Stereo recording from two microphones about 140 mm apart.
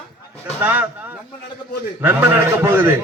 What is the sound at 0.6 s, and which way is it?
Speech, 10° right (ahead or behind).